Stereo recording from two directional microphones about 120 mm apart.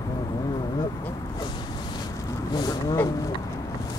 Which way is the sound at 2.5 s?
35° left (ahead or behind).